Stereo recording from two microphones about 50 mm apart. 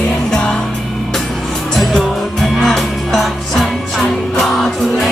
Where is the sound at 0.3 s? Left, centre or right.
Centre.